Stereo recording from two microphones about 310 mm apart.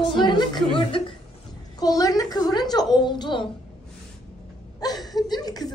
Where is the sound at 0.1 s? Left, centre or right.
Centre.